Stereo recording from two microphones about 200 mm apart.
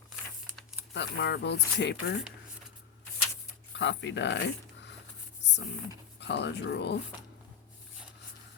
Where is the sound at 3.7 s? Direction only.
65° left (ahead or behind).